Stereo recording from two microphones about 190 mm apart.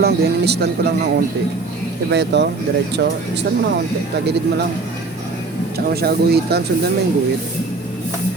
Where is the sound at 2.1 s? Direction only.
65° right (ahead or behind).